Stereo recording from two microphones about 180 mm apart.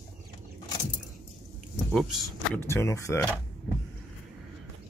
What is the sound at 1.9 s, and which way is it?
Speech, centre (ahead or behind).